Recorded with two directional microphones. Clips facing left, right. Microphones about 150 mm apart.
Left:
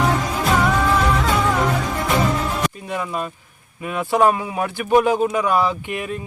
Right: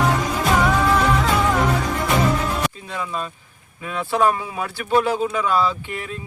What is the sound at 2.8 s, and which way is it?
Speech, 15° left (ahead or behind).